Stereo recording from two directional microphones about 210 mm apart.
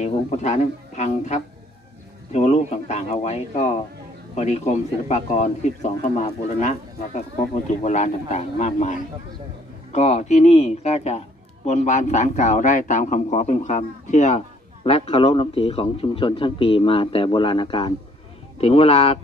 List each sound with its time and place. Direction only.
0.0 s a man's voice: 30° left (ahead or behind)
9.9 s a man's voice: 30° left (ahead or behind)